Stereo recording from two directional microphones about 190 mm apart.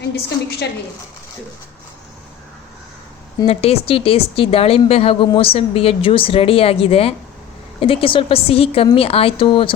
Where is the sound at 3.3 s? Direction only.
30° left (ahead or behind).